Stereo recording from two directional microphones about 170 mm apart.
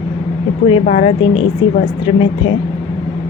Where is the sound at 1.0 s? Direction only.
30° left (ahead or behind).